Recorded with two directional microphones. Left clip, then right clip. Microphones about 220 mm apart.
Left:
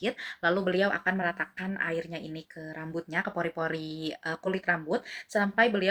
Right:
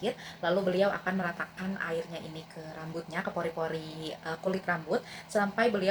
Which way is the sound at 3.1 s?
25° left (ahead or behind).